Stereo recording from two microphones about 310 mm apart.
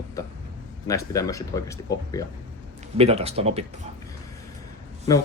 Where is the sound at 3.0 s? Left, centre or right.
Centre.